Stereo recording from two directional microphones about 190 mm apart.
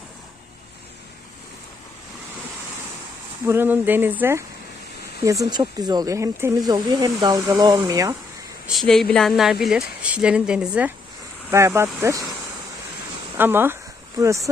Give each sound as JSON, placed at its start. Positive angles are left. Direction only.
{"t": 3.4, "sound": "speech", "side_deg": -10}
{"t": 8.6, "sound": "speech", "side_deg": 0}
{"t": 13.3, "sound": "speech", "side_deg": -10}